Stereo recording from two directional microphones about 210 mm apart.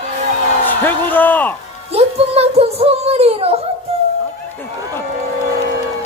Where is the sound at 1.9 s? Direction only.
30° right (ahead or behind).